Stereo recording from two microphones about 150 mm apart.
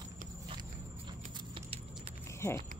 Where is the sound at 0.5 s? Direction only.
30° right (ahead or behind).